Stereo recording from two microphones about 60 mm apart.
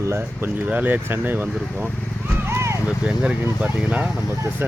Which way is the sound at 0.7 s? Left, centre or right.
Right.